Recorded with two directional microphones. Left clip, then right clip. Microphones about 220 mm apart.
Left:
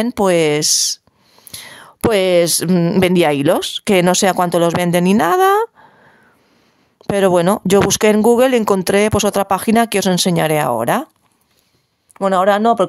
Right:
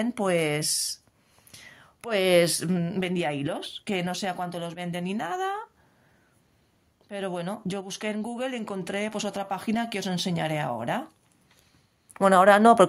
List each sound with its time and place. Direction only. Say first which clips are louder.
0.0 s speech: left 12 dB; 35° left (ahead or behind)
7.1 s speech: left 19 dB; 50° left (ahead or behind)
12.1 s speech: left 4 dB; 20° left (ahead or behind)